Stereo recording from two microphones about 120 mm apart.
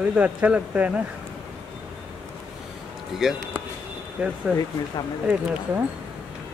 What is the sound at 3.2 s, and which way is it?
Speech, 5° right (ahead or behind).